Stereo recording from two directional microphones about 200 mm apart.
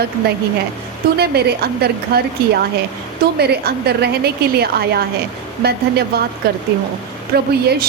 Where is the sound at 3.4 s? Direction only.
55° right (ahead or behind).